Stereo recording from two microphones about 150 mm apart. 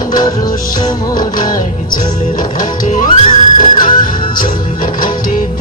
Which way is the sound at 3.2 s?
35° left (ahead or behind).